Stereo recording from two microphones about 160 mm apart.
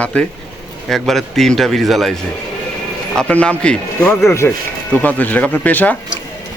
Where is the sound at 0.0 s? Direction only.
10° left (ahead or behind).